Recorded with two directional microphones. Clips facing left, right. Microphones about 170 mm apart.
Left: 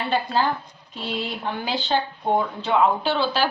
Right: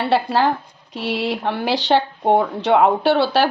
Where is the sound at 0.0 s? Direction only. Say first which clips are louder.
Right 5 dB; 75° right (ahead or behind).